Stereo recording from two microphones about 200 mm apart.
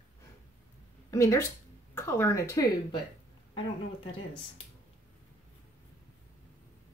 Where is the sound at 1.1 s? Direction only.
15° left (ahead or behind).